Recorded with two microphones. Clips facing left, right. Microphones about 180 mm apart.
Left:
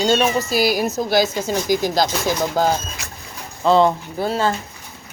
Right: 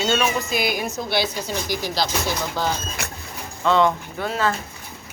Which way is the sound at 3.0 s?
65° right (ahead or behind).